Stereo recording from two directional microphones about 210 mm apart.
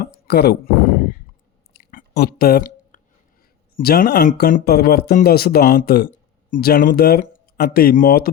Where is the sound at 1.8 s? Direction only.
45° left (ahead or behind).